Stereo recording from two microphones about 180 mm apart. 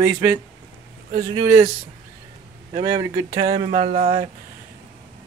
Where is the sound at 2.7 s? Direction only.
25° right (ahead or behind); by 4.2 s 40° right (ahead or behind).